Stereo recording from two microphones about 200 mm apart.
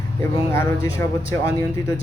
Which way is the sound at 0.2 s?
15° left (ahead or behind).